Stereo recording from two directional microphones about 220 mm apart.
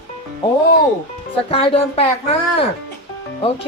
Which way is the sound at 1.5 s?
25° left (ahead or behind).